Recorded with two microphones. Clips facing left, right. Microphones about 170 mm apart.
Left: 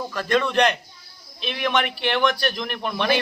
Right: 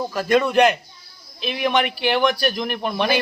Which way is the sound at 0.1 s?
10° right (ahead or behind).